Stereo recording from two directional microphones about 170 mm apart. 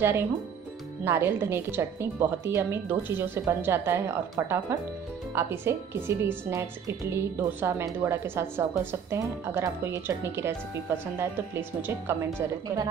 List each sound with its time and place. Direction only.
0.0 s a woman's voice: 15° right (ahead or behind)